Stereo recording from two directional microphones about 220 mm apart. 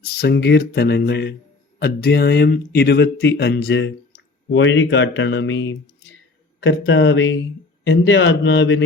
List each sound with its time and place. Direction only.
0.0 s a man's voice: 45° left (ahead or behind)